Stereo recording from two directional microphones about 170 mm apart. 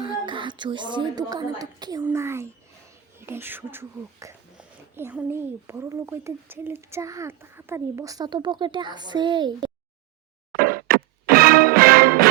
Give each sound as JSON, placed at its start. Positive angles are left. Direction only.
{"t": 0.0, "sound": "speech", "side_deg": -30}
{"t": 10.5, "sound": "music", "side_deg": -60}